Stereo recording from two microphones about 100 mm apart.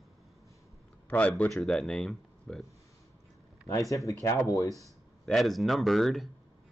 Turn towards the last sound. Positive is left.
turn(degrees=0)  # may be behind; listen again after turning